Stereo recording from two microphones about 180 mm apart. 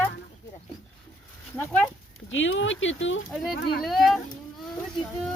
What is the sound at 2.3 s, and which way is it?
Speech, 90° left.